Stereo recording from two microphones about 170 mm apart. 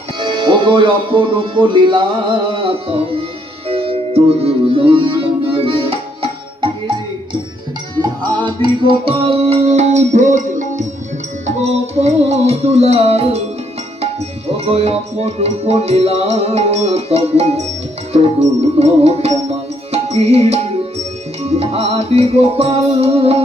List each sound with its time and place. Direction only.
0.2 s speech: 30° right (ahead or behind)
2.5 s tabla: 30° right (ahead or behind)
3.7 s music: 35° right (ahead or behind)
11.4 s tabla: 40° right (ahead or behind)
18.8 s tabla: 35° right (ahead or behind)
19.9 s music: 35° right (ahead or behind)
21.4 s tabla: 35° right (ahead or behind)